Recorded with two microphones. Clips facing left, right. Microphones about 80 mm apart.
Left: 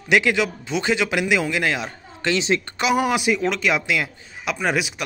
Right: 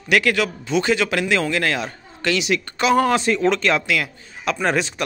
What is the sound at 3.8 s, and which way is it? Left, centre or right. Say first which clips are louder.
Speech: right 1 dB; left.